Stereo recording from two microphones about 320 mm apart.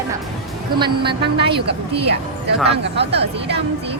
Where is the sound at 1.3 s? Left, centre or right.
Right.